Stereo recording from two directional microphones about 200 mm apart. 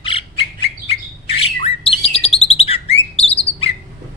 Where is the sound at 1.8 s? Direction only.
30° left (ahead or behind).